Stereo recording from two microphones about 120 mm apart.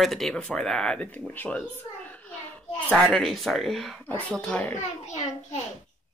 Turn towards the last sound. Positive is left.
turn(degrees=70)  # may be behind; listen again after turning